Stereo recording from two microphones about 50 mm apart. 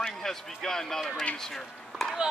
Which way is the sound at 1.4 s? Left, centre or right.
Centre.